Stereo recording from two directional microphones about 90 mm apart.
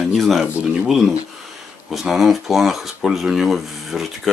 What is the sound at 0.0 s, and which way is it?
Speech, centre (ahead or behind).